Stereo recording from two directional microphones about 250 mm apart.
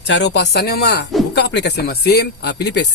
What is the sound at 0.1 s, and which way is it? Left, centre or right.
Speech, left.